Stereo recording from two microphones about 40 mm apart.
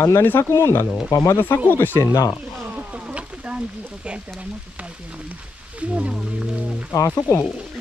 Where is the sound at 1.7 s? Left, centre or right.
Left.